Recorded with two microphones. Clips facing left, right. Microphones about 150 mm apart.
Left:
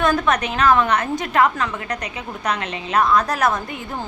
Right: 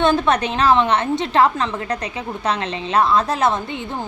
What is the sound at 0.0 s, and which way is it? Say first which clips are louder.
Speech: right 2 dB; 30° right (ahead or behind).